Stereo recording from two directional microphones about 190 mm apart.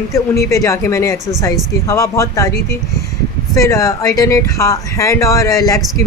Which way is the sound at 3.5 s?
15° left (ahead or behind).